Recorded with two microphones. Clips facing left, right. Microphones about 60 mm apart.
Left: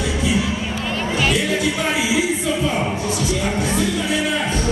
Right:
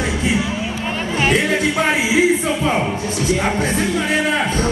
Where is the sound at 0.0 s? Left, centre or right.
Right.